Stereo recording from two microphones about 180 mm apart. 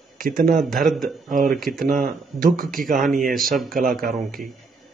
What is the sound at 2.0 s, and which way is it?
Speech, 50° right (ahead or behind).